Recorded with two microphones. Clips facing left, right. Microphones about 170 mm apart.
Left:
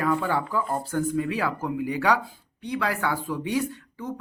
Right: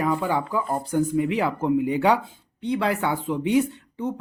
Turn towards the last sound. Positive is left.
turn(degrees=-25)  # may be behind; listen again after turning